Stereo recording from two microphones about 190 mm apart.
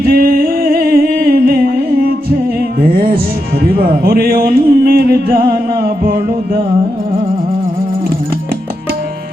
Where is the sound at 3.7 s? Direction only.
55° right (ahead or behind).